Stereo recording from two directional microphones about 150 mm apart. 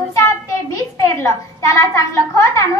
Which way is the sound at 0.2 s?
20° left (ahead or behind).